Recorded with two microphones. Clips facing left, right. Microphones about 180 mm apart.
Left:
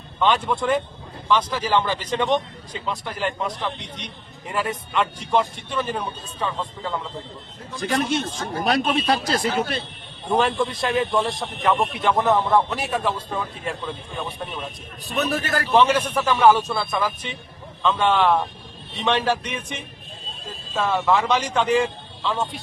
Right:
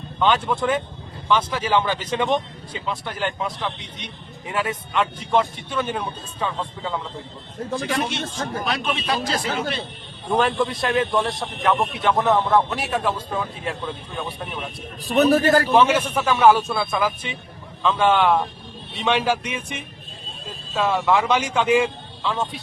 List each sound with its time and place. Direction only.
0.2 s a man's voice: centre (ahead or behind)
7.8 s a man's voice: 40° left (ahead or behind)
10.3 s a man's voice: centre (ahead or behind)
15.0 s a man's voice: 35° right (ahead or behind)
15.7 s a man's voice: 5° right (ahead or behind)